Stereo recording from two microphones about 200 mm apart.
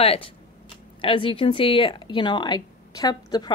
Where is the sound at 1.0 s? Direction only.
25° left (ahead or behind).